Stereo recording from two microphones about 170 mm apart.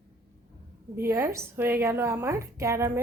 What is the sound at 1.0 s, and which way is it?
A woman's voice, 15° right (ahead or behind).